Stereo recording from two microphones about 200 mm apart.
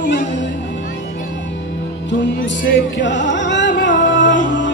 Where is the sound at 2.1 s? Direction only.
65° left (ahead or behind).